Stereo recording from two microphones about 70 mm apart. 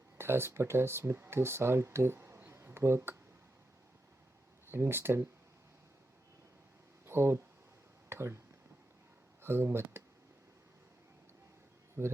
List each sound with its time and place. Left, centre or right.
0.2 s speech: right
2.5 s a sound: right
4.7 s speech: right
7.0 s speech: right
9.4 s speech: right
12.0 s speech: right